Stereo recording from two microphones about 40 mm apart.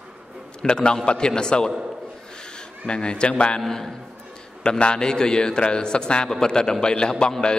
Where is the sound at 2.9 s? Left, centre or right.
Left.